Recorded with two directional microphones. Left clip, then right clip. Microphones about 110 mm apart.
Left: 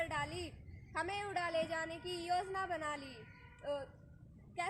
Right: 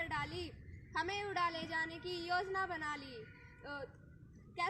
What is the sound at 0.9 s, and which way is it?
A woman's voice, 35° left (ahead or behind).